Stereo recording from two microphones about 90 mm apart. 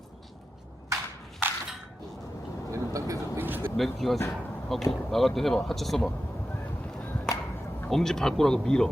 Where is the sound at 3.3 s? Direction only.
20° right (ahead or behind).